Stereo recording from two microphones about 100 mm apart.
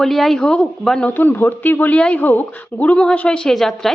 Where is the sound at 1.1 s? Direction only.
20° left (ahead or behind).